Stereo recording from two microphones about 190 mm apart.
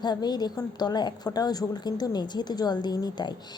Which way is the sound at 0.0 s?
20° left (ahead or behind).